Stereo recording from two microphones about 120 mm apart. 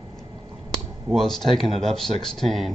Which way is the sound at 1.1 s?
Centre (ahead or behind).